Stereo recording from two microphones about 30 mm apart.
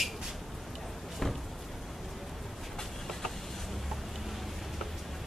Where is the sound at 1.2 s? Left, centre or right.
Centre.